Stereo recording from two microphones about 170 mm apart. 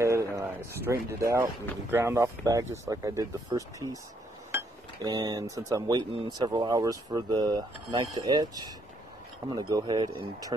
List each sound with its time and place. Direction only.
0.0 s a sound: 15° right (ahead or behind)
1.2 s speech: 15° right (ahead or behind)
5.0 s speech: 25° right (ahead or behind)